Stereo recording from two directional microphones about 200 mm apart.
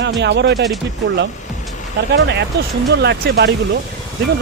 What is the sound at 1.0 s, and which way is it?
Speech, 65° right (ahead or behind).